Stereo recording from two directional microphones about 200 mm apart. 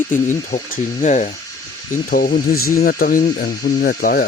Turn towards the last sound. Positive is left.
turn(degrees=45)  # may be behind; listen again after turning